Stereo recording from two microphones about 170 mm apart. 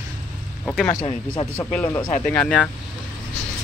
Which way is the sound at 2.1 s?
10° left (ahead or behind).